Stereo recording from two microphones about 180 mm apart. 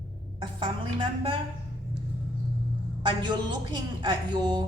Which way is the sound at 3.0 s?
25° right (ahead or behind).